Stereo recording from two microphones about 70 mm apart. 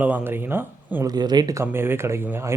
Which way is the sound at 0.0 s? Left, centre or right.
Right.